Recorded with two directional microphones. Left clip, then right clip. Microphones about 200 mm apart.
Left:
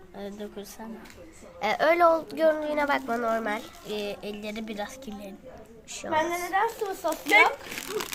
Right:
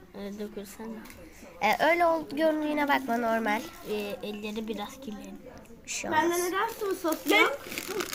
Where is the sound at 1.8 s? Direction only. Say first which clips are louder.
Left 6 dB; 20° left (ahead or behind).